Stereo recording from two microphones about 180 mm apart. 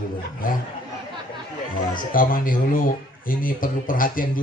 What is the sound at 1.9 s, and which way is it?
Speech, 50° left (ahead or behind).